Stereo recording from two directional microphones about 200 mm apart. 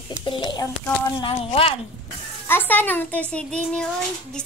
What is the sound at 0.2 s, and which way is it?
Speech, 20° left (ahead or behind).